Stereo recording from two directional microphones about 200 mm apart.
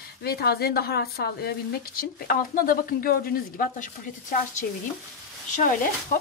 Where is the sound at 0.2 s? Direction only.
50° left (ahead or behind).